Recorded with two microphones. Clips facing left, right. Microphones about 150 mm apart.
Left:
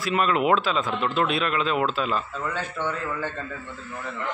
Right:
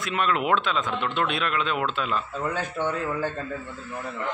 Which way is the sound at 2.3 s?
15° right (ahead or behind).